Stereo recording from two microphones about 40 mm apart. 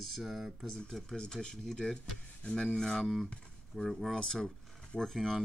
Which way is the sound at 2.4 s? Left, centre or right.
Left.